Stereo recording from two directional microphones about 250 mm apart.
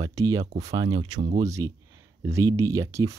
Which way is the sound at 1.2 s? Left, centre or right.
Right.